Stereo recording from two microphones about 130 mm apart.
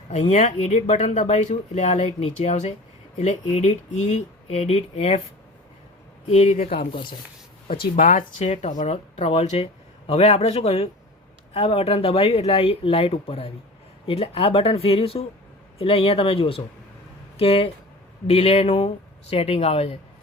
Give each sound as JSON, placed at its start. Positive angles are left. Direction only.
{"t": 0.2, "sound": "speech", "side_deg": 65}
{"t": 6.5, "sound": "speech", "side_deg": 90}
{"t": 8.4, "sound": "speech", "side_deg": 65}